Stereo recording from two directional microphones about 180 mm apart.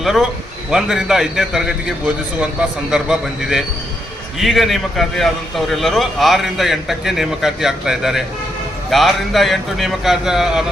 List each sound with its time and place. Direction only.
0.0 s a man's voice: centre (ahead or behind)